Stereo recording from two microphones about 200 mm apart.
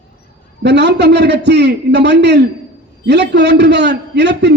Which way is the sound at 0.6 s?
60° right (ahead or behind).